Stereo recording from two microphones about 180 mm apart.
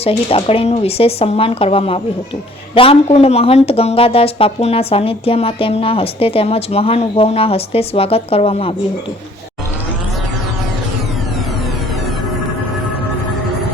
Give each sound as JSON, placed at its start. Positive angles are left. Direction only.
{"t": 0.0, "sound": "speech", "side_deg": 35}